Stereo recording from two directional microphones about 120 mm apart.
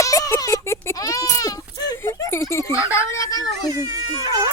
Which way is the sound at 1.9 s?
20° left (ahead or behind).